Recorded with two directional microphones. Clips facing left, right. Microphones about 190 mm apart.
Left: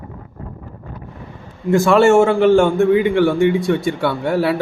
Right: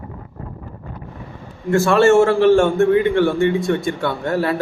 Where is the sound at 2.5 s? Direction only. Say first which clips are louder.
Left 1 dB; 10° left (ahead or behind).